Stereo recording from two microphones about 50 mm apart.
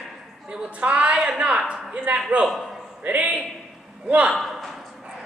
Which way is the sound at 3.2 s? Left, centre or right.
Right.